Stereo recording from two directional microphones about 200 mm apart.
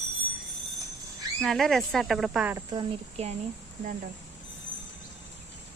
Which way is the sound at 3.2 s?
30° right (ahead or behind).